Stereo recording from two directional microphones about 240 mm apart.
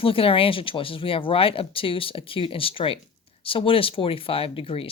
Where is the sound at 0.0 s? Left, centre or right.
Left.